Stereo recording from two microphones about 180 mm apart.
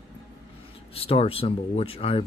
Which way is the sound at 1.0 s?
30° left (ahead or behind).